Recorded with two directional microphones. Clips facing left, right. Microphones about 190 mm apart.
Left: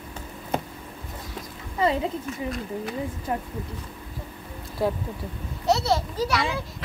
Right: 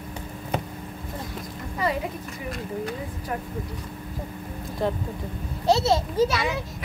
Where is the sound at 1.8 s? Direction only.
25° left (ahead or behind).